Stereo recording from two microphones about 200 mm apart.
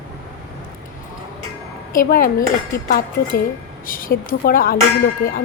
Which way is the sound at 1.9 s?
45° left (ahead or behind).